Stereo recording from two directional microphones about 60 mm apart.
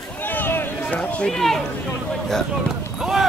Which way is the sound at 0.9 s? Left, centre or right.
Left.